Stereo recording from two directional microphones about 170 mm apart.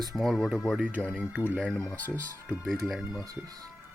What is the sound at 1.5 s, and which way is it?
Speech, 5° left (ahead or behind).